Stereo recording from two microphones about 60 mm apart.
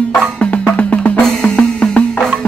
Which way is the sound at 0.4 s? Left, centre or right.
Left.